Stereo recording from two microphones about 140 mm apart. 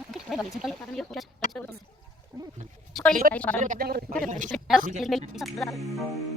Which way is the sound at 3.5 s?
70° right (ahead or behind).